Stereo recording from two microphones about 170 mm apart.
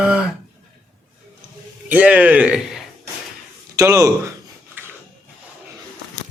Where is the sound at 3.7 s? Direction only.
15° right (ahead or behind).